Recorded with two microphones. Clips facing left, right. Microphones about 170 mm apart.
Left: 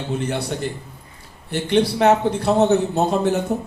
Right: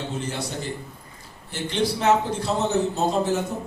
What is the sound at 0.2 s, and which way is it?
A man's voice, 65° left (ahead or behind).